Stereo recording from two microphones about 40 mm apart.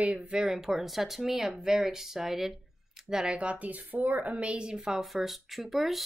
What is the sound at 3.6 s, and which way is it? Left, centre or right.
Speech, right.